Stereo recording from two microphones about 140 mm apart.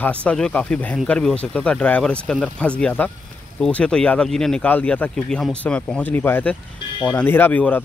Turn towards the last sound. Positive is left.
turn(degrees=10)  # may be behind; listen again after turning